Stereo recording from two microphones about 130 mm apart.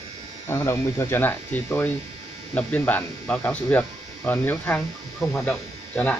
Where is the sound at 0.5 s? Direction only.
20° left (ahead or behind).